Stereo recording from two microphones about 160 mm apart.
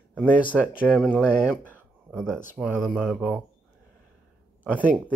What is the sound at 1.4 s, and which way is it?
Speech, 5° right (ahead or behind).